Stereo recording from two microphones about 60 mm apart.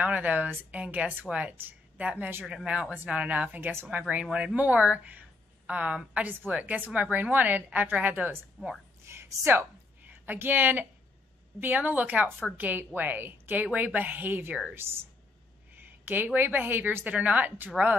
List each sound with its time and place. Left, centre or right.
0.0 s a woman's voice: right
1.6 s a sound: right
2.1 s a woman's voice: right
2.4 s a woman's voice: centre
8.6 s speech: centre
9.0 s speech: right
10.0 s a woman's voice: right
15.7 s a sound: right
16.3 s a woman's voice: right